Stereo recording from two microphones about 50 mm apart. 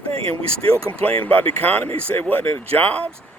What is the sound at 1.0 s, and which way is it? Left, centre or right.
Speech, left.